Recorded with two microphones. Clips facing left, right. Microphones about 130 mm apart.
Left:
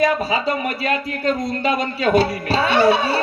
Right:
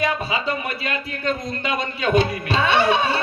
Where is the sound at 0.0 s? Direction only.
40° left (ahead or behind).